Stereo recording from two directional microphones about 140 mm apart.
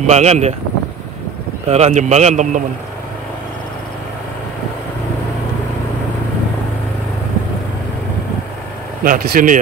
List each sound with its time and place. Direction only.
0.0 s speech: 55° right (ahead or behind)
1.7 s a man's voice: 55° right (ahead or behind)
9.0 s speech: 80° right